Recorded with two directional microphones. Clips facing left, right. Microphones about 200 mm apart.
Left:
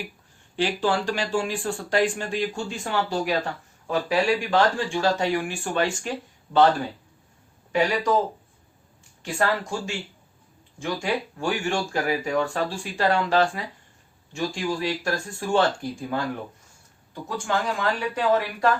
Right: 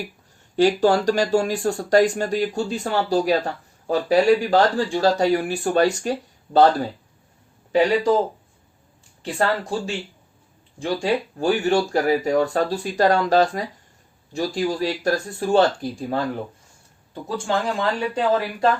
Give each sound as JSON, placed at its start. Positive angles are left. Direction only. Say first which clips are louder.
{"t": 0.5, "sound": "speech", "louder": "right 7 dB", "side_deg": -40}
{"t": 9.2, "sound": "speech", "louder": "right 2 dB", "side_deg": -35}